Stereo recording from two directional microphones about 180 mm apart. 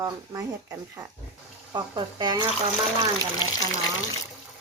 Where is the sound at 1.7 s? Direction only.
25° right (ahead or behind).